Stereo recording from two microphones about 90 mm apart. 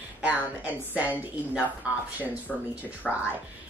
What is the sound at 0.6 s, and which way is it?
Speech, 15° right (ahead or behind).